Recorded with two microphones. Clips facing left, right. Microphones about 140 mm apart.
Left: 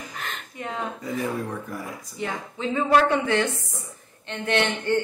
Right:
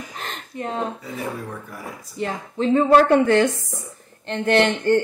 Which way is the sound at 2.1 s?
40° right (ahead or behind).